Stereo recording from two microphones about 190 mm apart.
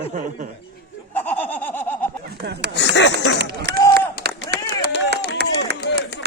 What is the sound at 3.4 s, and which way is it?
Speech, 65° right (ahead or behind).